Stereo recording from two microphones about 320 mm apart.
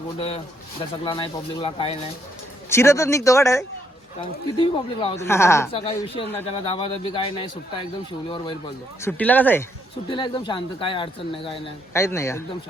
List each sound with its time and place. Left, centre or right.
0.2 s speech: centre